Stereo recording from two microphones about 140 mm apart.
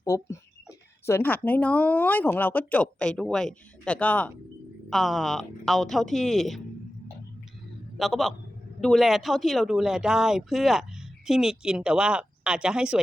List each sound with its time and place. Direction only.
0.0 s speech: 20° left (ahead or behind); by 6.6 s centre (ahead or behind)
7.9 s speech: centre (ahead or behind)